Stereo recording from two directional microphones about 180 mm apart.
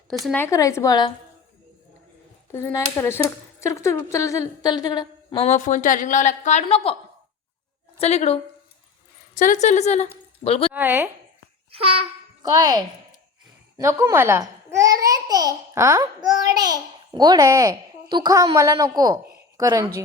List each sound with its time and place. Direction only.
0.3 s a woman's voice: 10° left (ahead or behind)
2.5 s speech: 15° left (ahead or behind); by 6.9 s 30° left (ahead or behind)
7.9 s a woman's voice: 35° left (ahead or behind)
10.7 s a woman's voice: 10° right (ahead or behind)
11.7 s babbling: 30° right (ahead or behind)
12.5 s a child's voice: 20° right (ahead or behind)
19.4 s a sound: 20° right (ahead or behind)